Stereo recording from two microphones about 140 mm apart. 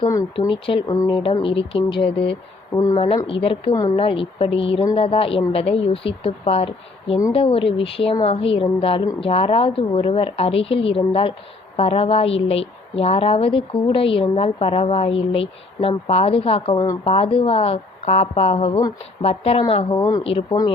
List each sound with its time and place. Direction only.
0.3 s a woman's voice: 35° left (ahead or behind)
0.9 s speech: 25° left (ahead or behind)
1.2 s a woman's voice: 40° left (ahead or behind)
2.7 s speech: 25° left (ahead or behind)
3.2 s a woman's voice: 40° left (ahead or behind)
16.7 s speech: 20° left (ahead or behind)
17.0 s a woman's voice: 40° left (ahead or behind)
20.0 s speech: 25° left (ahead or behind)
20.2 s a woman's voice: 40° left (ahead or behind)